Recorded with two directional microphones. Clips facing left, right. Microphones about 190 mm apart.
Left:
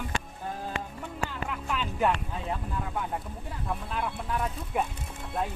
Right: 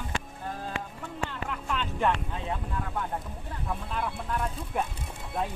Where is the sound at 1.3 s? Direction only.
5° left (ahead or behind).